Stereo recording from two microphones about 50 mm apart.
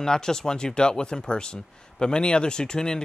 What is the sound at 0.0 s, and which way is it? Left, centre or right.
Speech, centre.